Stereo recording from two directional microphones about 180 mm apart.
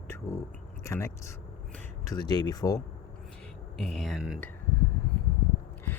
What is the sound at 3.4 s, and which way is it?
Speech, centre (ahead or behind).